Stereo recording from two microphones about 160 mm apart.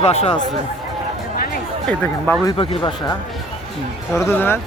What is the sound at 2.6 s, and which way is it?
Speech, 30° left (ahead or behind).